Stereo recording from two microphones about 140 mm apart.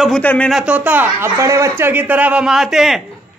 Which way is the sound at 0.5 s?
10° right (ahead or behind).